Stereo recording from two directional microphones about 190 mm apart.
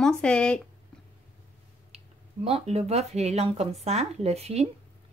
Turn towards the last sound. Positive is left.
turn(degrees=-35)  # may be behind; listen again after turning